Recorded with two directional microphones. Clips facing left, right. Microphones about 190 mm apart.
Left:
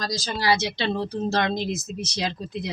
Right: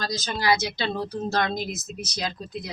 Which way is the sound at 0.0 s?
30° left (ahead or behind).